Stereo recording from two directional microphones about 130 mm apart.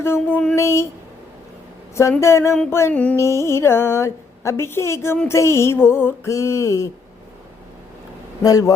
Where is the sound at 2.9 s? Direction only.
10° left (ahead or behind).